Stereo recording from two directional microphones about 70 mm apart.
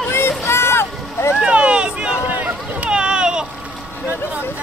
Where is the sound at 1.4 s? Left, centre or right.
Centre.